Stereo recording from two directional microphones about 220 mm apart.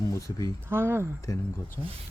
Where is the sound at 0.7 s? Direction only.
10° right (ahead or behind).